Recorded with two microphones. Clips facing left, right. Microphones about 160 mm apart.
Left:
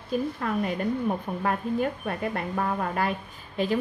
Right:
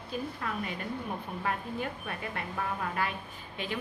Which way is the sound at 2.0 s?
40° left (ahead or behind).